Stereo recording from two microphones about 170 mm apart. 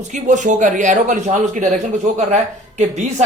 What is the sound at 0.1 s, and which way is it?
A man's voice, 45° right (ahead or behind).